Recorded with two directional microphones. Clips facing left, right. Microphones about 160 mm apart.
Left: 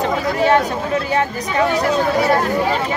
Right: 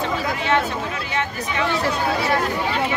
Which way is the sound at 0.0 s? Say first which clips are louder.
Left 7 dB; 40° left (ahead or behind).